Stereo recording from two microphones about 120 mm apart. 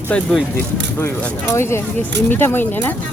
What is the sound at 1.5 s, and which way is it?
Speech, 20° left (ahead or behind).